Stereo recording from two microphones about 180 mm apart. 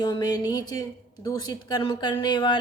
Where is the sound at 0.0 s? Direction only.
20° left (ahead or behind).